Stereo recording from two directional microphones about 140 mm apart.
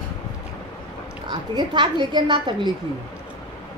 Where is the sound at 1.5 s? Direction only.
30° right (ahead or behind).